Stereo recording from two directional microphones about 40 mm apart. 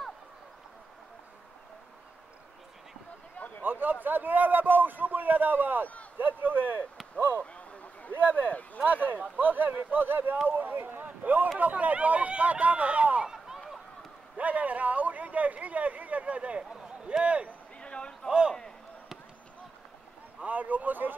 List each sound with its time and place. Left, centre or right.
3.3 s a sound: left
3.6 s a sound: right
4.0 s a man's voice: right
7.5 s a sound: left
8.1 s speech: right
11.5 s speech: right
14.3 s speech: right
17.7 s basketball bounce: left
20.4 s speech: right